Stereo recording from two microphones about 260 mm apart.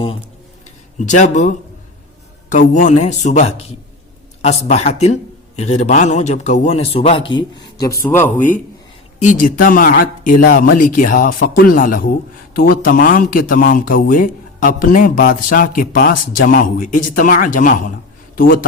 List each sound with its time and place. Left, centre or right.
0.9 s a man's voice: left; by 8.4 s centre
8.4 s speech: left